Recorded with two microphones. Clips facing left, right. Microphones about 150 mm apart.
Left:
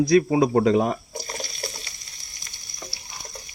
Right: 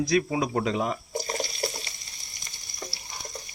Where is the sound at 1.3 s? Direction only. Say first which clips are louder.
Right 3 dB; 25° right (ahead or behind).